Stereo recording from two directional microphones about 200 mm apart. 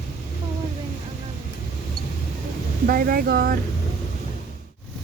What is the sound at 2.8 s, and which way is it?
Speech, 45° right (ahead or behind).